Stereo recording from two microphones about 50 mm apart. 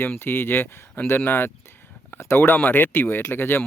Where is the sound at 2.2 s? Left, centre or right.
Left.